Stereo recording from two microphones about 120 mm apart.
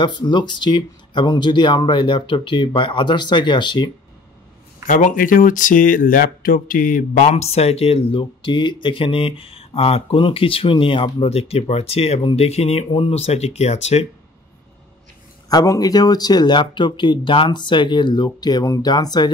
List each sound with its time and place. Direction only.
0.0 s speech: 40° left (ahead or behind)
4.8 s speech: 90° left
7.2 s speech: 70° left (ahead or behind)
15.5 s speech: 30° left (ahead or behind)